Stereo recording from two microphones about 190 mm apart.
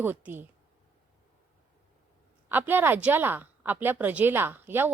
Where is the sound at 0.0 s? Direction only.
10° right (ahead or behind).